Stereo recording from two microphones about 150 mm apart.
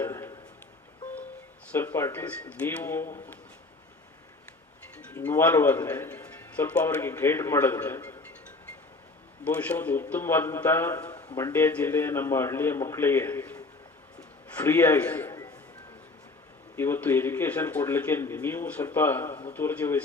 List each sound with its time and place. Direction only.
0.0 s a sound: 15° left (ahead or behind)
1.7 s speech: 15° left (ahead or behind)
4.9 s a man's voice: 15° left (ahead or behind)
9.4 s speech: 10° left (ahead or behind)
14.2 s a sound: 10° left (ahead or behind)
16.7 s speech: 15° left (ahead or behind)